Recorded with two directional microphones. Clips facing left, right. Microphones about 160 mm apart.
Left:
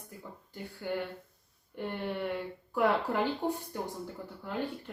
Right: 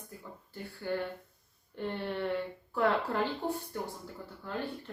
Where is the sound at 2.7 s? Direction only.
15° left (ahead or behind).